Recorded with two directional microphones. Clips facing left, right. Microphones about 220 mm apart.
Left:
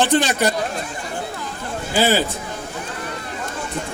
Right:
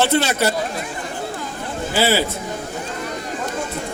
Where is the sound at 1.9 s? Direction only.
15° left (ahead or behind).